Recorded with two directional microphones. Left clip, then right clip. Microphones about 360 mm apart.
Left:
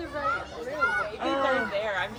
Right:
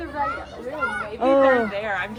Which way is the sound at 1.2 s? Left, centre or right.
Centre.